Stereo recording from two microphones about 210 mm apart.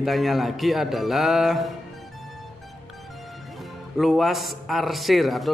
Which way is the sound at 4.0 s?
Centre (ahead or behind).